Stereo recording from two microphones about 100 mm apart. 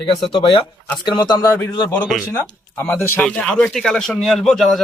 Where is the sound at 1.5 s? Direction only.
20° left (ahead or behind).